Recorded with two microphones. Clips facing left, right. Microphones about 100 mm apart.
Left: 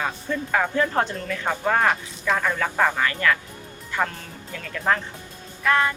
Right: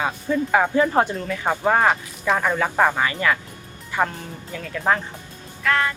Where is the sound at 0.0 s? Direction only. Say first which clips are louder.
Right 4 dB; 10° right (ahead or behind).